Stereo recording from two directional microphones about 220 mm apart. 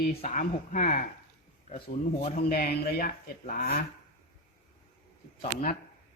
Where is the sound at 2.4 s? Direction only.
45° left (ahead or behind).